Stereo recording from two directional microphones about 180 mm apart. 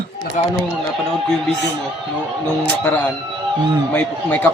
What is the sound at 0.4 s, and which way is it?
Speech, 40° left (ahead or behind).